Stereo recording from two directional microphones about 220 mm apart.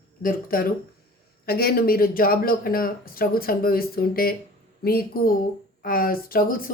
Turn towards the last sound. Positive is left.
turn(degrees=40)  # may be behind; listen again after turning